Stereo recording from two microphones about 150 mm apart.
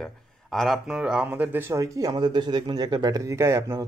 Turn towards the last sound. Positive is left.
turn(degrees=-20)  # may be behind; listen again after turning